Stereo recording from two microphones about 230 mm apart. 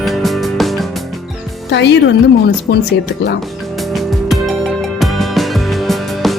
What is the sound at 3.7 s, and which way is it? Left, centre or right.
Music, centre.